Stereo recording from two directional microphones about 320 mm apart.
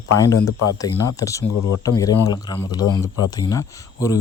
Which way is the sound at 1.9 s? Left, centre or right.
Centre.